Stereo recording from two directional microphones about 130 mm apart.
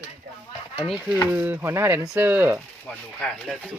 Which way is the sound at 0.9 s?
Centre (ahead or behind).